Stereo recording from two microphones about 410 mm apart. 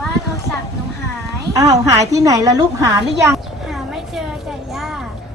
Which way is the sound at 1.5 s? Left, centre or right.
Centre.